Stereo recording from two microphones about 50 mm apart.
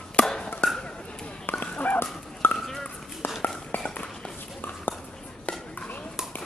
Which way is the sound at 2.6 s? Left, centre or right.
Centre.